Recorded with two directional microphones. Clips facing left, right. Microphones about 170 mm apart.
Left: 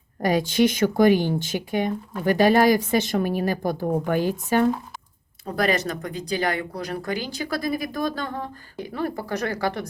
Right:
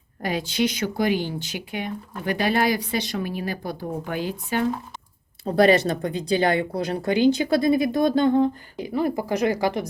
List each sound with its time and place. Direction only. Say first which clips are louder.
0.2 s speech: left 4 dB; 45° left (ahead or behind)
5.5 s speech: right 6 dB; 30° right (ahead or behind)
8.8 s speech: right 4 dB; 10° right (ahead or behind)